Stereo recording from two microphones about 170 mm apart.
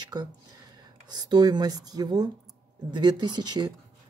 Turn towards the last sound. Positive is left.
turn(degrees=-25)  # may be behind; listen again after turning